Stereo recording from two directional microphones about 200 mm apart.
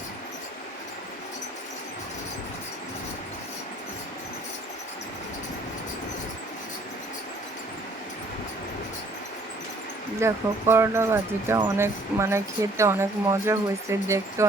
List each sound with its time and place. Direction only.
10.2 s speech: 15° right (ahead or behind)